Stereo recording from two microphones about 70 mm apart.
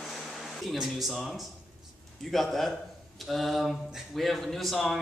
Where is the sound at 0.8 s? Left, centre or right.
Centre.